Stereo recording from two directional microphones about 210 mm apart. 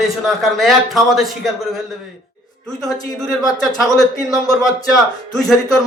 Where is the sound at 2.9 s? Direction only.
20° left (ahead or behind).